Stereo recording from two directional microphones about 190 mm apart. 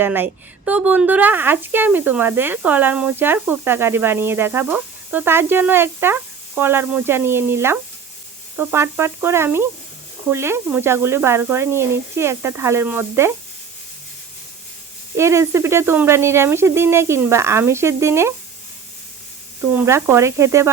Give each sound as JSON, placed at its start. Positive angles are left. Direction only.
{"t": 0.0, "sound": "speech", "side_deg": -10}
{"t": 15.1, "sound": "speech", "side_deg": -15}
{"t": 19.8, "sound": "speech", "side_deg": -15}